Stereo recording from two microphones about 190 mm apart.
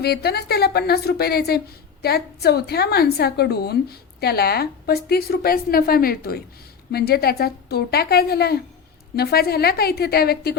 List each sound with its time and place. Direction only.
0.0 s a woman's voice: 55° left (ahead or behind)